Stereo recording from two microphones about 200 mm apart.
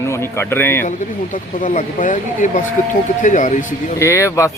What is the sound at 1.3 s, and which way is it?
Speech, 40° left (ahead or behind).